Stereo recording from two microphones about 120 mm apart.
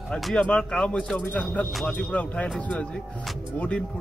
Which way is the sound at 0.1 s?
5° left (ahead or behind).